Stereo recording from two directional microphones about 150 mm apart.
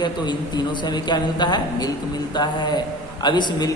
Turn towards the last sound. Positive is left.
turn(degrees=30)  # may be behind; listen again after turning